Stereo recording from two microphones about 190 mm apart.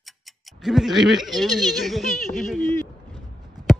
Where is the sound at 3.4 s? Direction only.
20° right (ahead or behind).